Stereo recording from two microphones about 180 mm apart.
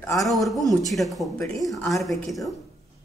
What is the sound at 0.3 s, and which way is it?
A woman's voice, centre (ahead or behind).